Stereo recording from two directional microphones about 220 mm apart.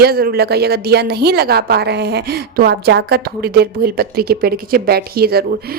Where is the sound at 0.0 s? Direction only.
45° right (ahead or behind).